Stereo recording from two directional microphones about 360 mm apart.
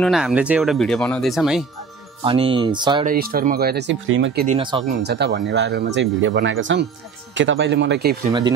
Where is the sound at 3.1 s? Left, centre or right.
Right.